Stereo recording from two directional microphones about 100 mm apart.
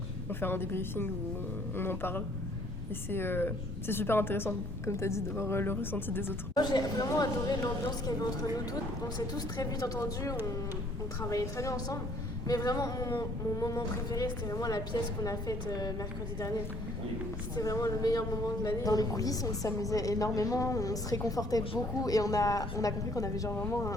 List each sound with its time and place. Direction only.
0.3 s a woman's voice: 20° left (ahead or behind)
6.5 s speech: 45° left (ahead or behind)
17.6 s speech: 35° left (ahead or behind)